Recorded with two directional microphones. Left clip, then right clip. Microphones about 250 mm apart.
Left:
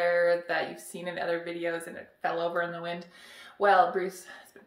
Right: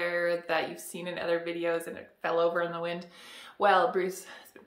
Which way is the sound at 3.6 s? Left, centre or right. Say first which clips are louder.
Left 1 dB; right.